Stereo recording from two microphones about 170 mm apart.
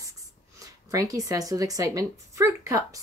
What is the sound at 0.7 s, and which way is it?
A woman's voice, 20° right (ahead or behind).